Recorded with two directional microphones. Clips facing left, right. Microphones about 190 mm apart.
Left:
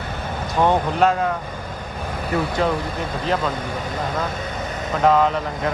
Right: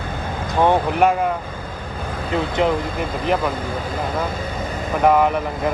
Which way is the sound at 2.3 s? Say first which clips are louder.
Right 2 dB; 20° right (ahead or behind).